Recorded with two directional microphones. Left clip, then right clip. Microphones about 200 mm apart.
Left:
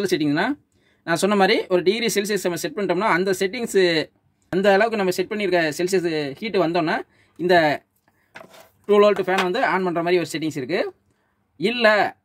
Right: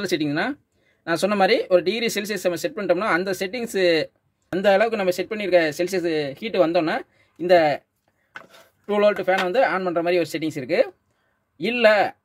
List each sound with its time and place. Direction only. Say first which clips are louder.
0.0 s speech: left 2 dB; centre (ahead or behind)
8.8 s speech: left 3 dB; centre (ahead or behind)